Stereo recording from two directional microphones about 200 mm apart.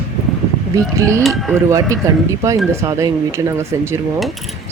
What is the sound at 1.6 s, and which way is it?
Speech, 15° right (ahead or behind).